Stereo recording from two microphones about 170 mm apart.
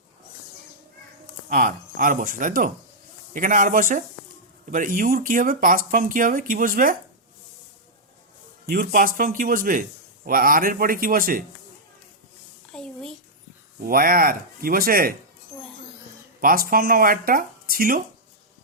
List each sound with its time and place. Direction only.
1.5 s speech: 55° right (ahead or behind)
8.6 s speech: 60° right (ahead or behind)
12.7 s a sound: 5° left (ahead or behind)
13.8 s speech: 60° right (ahead or behind)
16.4 s speech: 55° right (ahead or behind)